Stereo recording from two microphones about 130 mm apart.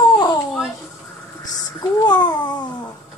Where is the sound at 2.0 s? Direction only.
35° left (ahead or behind).